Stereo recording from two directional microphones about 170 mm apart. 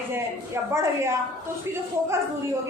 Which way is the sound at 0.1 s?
15° right (ahead or behind).